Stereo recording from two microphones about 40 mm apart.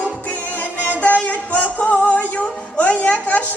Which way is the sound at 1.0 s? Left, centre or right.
Left.